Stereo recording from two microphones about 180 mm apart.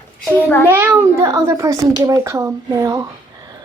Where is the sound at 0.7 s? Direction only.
10° right (ahead or behind).